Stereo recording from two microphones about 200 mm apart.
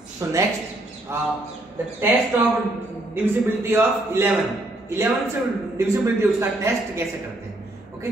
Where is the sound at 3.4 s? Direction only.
10° right (ahead or behind).